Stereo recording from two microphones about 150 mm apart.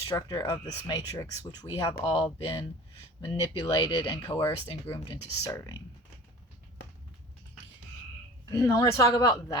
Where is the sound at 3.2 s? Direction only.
35° left (ahead or behind).